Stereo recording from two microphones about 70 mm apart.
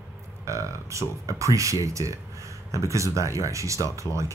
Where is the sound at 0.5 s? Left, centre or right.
Right.